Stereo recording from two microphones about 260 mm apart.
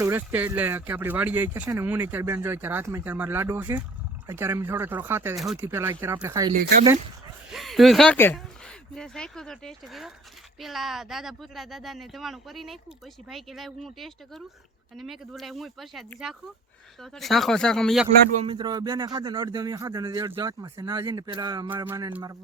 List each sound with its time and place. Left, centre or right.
0.0 s speech: centre
6.5 s speech: right
7.5 s speech: centre
18.4 s speech: centre